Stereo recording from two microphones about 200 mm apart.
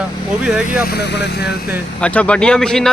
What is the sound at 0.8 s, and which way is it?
Speech, 55° left (ahead or behind).